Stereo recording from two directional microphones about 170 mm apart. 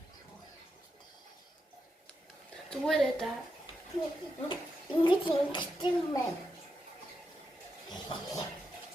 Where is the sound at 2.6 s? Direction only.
5° left (ahead or behind).